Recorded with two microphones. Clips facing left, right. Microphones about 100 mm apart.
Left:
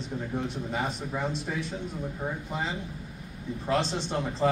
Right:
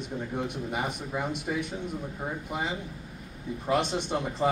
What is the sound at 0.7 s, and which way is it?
A man's voice, 15° right (ahead or behind).